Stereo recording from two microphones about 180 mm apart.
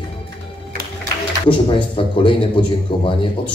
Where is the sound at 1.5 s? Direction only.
30° left (ahead or behind).